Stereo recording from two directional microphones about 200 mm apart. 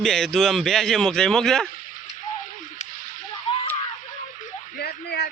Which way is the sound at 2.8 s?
35° left (ahead or behind).